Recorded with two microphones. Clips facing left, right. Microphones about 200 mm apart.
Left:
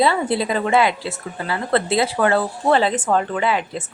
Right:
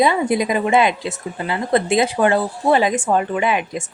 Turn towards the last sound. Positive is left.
turn(degrees=-15)  # may be behind; listen again after turning